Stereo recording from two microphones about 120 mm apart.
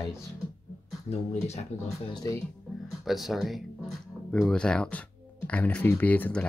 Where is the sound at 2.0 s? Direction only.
40° left (ahead or behind).